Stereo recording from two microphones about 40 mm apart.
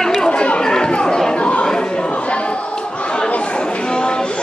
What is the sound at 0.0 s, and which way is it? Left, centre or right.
Chatter, centre.